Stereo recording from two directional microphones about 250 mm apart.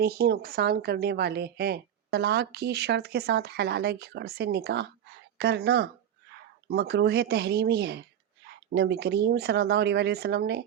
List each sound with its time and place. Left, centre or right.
0.0 s speech: right